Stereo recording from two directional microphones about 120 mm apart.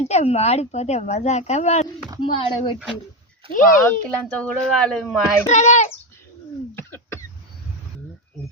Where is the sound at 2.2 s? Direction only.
45° left (ahead or behind).